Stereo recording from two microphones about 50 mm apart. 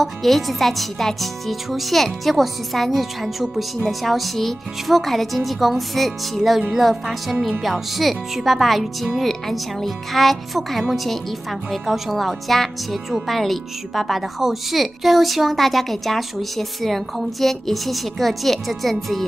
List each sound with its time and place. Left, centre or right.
0.0 s speech: centre